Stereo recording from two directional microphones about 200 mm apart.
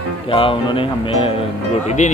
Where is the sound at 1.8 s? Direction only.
35° left (ahead or behind).